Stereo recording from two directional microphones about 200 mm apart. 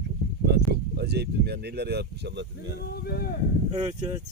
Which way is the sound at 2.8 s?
50° left (ahead or behind).